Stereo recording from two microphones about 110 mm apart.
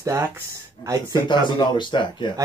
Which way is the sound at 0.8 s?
45° left (ahead or behind).